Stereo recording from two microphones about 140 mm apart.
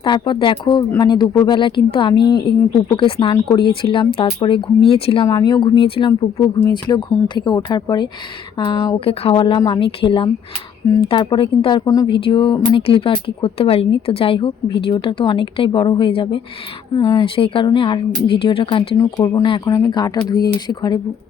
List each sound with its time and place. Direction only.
0.0 s speech: 35° left (ahead or behind)
5.2 s speech: 30° left (ahead or behind)
18.9 s speech: 25° left (ahead or behind)